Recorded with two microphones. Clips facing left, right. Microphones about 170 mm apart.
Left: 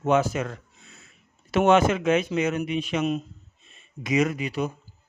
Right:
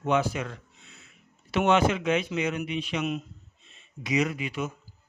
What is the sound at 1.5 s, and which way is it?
Speech, 45° left (ahead or behind).